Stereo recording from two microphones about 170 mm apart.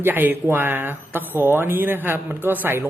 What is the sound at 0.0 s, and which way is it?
Speech, 10° right (ahead or behind).